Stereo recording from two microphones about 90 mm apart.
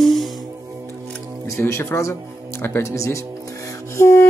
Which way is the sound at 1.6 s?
25° left (ahead or behind).